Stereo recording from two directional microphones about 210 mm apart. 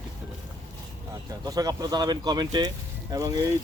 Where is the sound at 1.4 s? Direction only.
15° right (ahead or behind).